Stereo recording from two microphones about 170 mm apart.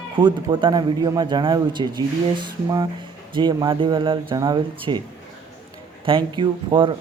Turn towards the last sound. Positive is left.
turn(degrees=-30)  # may be behind; listen again after turning